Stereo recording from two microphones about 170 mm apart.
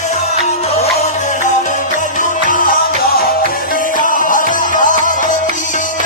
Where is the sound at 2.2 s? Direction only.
50° left (ahead or behind).